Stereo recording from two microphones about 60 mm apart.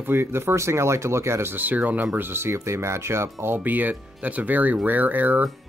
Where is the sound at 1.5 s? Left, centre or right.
Right.